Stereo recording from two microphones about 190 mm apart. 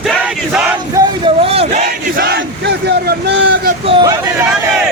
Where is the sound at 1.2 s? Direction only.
30° right (ahead or behind).